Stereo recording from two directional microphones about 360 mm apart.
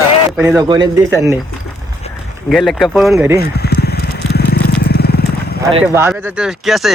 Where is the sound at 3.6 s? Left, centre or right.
Left.